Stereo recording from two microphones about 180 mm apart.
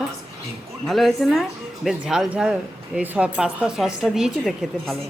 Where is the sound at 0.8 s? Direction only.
Centre (ahead or behind).